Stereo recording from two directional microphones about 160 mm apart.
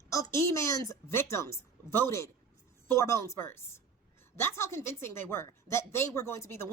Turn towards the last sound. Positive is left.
turn(degrees=15)  # may be behind; listen again after turning